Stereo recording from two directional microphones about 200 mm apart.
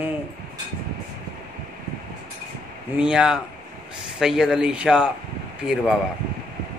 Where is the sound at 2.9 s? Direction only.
5° right (ahead or behind).